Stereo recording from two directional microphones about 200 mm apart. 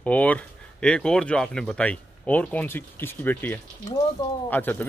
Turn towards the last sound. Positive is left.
turn(degrees=10)  # may be behind; listen again after turning